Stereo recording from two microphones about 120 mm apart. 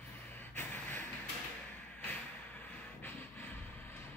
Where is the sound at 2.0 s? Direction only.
15° left (ahead or behind).